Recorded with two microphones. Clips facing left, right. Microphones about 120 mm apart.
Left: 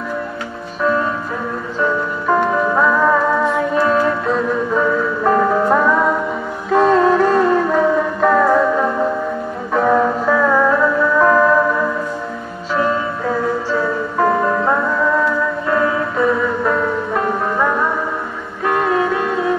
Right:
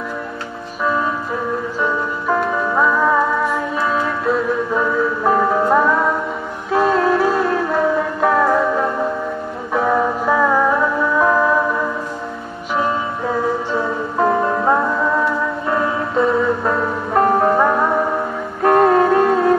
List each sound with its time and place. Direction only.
2.2 s music: centre (ahead or behind)
9.8 s music: 5° right (ahead or behind)
13.7 s music: 20° right (ahead or behind)
17.2 s music: 40° right (ahead or behind)
18.6 s music: 45° right (ahead or behind)